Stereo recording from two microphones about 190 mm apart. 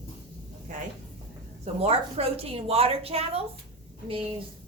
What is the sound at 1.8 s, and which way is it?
A woman's voice, 30° right (ahead or behind).